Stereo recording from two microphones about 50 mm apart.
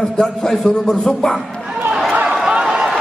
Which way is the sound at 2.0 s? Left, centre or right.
Right.